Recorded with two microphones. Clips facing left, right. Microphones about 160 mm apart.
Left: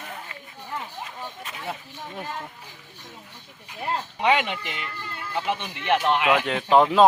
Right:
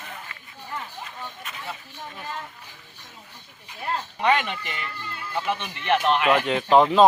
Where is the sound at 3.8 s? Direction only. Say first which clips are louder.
Even; 15° left (ahead or behind).